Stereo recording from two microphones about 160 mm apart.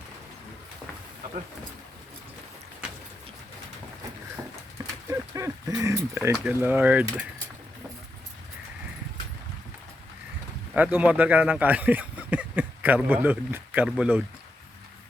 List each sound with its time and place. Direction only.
5.0 s a sound: 20° right (ahead or behind)
6.3 s speech: 10° right (ahead or behind)
10.8 s speech: 10° right (ahead or behind)